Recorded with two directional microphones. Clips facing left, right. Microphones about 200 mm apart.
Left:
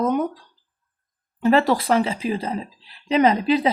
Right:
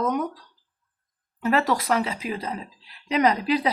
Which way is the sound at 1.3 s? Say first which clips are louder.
Left 5 dB; 30° left (ahead or behind).